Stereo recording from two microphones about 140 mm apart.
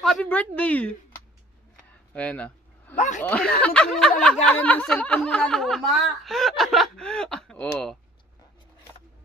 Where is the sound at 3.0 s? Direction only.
60° left (ahead or behind).